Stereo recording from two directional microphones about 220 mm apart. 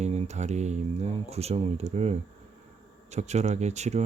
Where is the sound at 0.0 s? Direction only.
30° right (ahead or behind).